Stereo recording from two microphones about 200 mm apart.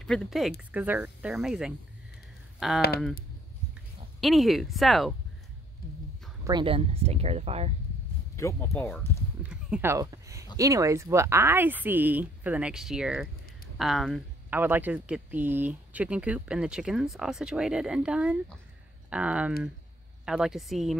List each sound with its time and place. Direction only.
0.0 s speech: 5° left (ahead or behind)
4.2 s speech: centre (ahead or behind)
6.4 s speech: 25° right (ahead or behind)
8.4 s speech: 15° left (ahead or behind)
9.4 s speech: 5° right (ahead or behind)